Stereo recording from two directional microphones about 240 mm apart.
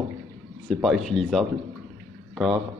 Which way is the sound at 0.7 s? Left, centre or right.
Centre.